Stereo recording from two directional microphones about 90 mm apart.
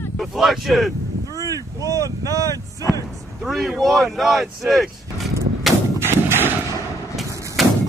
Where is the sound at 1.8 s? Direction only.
40° right (ahead or behind).